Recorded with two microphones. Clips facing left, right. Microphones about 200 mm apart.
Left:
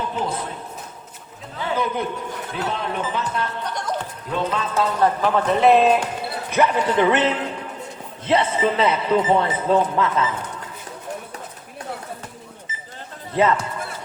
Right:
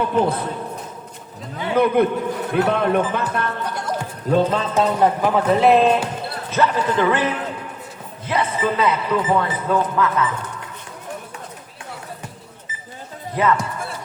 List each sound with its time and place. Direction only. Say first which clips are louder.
0.0 s speech: right 7 dB; 60° right (ahead or behind)
1.7 s speech: right 8 dB; 60° right (ahead or behind)
3.8 s music: left 2 dB; 10° right (ahead or behind)
4.3 s speech: right 7 dB; 40° right (ahead or behind)
4.7 s a man's voice: even; 15° right (ahead or behind); by 10.2 s 25° left (ahead or behind)
13.3 s a man's voice: left 1 dB; 25° left (ahead or behind)